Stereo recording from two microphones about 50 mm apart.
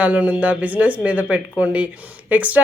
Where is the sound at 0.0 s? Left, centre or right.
Right.